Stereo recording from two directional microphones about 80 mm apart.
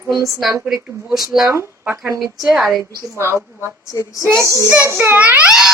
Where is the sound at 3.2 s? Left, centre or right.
Right.